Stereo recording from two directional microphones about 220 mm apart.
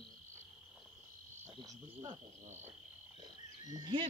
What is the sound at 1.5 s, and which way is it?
Insect, 20° right (ahead or behind).